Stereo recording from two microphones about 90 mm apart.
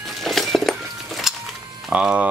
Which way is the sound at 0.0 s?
Centre (ahead or behind).